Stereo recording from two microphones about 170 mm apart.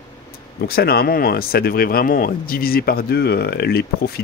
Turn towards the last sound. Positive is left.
turn(degrees=65)  # may be behind; listen again after turning